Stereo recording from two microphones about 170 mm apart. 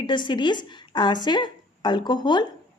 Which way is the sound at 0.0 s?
25° left (ahead or behind).